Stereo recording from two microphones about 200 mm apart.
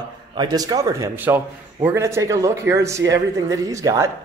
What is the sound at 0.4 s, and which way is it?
A man's voice, 20° right (ahead or behind).